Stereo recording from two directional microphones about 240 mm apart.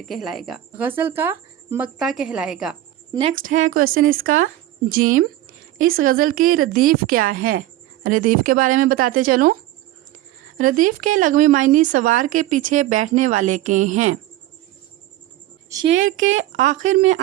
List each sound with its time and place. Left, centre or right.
0.1 s speech: centre
3.1 s a woman's voice: right
3.7 s speech: right
10.6 s speech: right
15.7 s a woman's voice: centre
16.0 s speech: right